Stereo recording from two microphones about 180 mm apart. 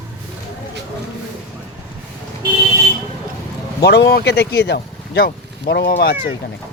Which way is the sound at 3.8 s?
65° left (ahead or behind).